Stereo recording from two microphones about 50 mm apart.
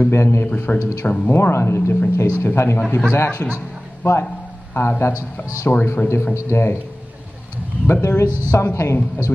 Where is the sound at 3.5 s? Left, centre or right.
Left.